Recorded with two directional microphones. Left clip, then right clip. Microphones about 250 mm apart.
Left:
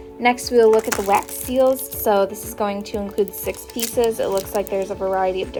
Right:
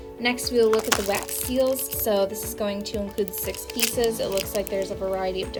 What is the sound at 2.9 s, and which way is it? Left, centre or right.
A woman's voice, centre.